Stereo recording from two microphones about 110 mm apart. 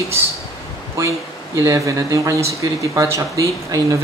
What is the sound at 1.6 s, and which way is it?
Speech, 30° right (ahead or behind).